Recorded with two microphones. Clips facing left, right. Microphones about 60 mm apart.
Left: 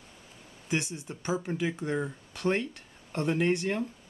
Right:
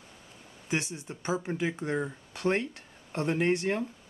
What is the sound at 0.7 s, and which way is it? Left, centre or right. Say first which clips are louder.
Speech: even; right.